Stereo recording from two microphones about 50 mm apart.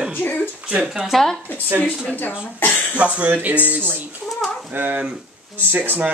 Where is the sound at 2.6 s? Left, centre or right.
Left.